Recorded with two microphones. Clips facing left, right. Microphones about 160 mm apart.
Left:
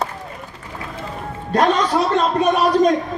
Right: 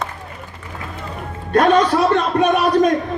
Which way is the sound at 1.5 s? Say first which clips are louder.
Right 3 dB; 55° right (ahead or behind).